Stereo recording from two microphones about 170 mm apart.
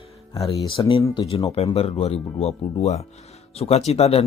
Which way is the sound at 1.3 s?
35° left (ahead or behind).